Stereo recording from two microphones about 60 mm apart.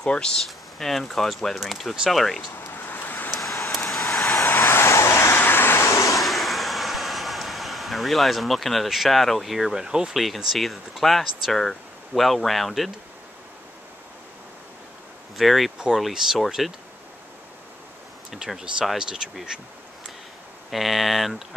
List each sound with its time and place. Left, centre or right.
0.0 s speech: centre
2.5 s vehicle: left
3.3 s vehicle: centre
4.4 s vehicle: left
5.4 s vehicle: left
5.8 s vehicle: left
6.1 s vehicle: centre
10.1 s speech: centre
15.3 s speech: centre
18.3 s speech: centre
20.7 s speech: centre